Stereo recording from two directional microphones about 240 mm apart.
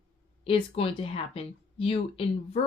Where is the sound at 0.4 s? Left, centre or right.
Left.